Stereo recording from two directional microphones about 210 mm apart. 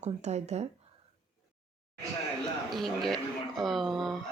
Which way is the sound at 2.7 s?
Centre (ahead or behind).